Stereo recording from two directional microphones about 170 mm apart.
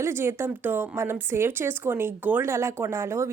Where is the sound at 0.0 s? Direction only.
15° right (ahead or behind).